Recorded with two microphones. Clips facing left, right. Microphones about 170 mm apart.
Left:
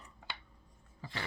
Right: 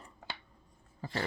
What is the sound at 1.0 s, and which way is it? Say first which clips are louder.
Roaring cats: right 7 dB; 40° right (ahead or behind).